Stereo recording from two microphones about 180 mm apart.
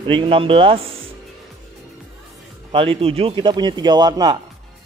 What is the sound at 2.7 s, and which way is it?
A man's voice, 30° right (ahead or behind).